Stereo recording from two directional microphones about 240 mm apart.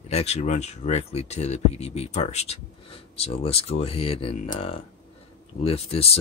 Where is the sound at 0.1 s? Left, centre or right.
Left.